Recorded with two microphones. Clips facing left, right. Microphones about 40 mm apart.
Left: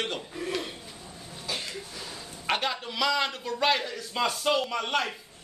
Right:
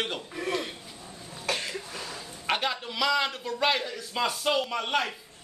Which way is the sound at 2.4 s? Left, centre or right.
Centre.